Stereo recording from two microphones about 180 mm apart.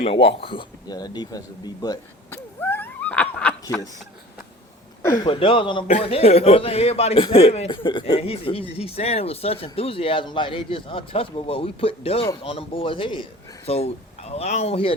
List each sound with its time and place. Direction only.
0.0 s a man's voice: 30° left (ahead or behind)
2.3 s cat: 10° left (ahead or behind)
5.0 s a man's voice: 25° left (ahead or behind)